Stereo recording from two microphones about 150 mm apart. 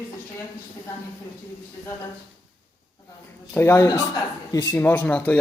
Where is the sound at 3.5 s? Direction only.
15° left (ahead or behind).